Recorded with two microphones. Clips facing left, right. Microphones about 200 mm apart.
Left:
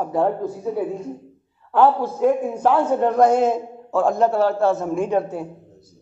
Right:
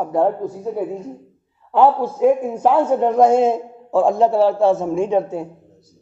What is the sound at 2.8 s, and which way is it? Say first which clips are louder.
A man's voice: right 2 dB; 20° right (ahead or behind).